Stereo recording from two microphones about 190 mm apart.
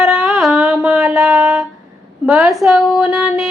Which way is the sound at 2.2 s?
5° right (ahead or behind).